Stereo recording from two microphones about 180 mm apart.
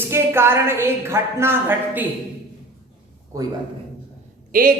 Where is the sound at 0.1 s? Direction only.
15° right (ahead or behind).